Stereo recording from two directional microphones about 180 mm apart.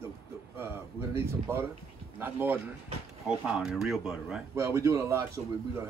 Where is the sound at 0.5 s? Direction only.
15° right (ahead or behind).